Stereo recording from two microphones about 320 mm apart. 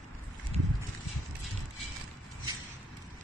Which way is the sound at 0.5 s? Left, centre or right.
Centre.